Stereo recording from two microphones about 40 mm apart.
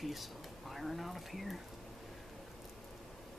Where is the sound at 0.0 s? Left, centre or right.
Centre.